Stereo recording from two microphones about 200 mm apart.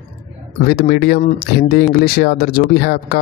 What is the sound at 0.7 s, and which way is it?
Speech, 50° left (ahead or behind).